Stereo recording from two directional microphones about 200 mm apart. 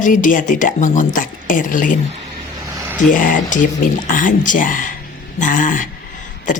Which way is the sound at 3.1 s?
40° left (ahead or behind).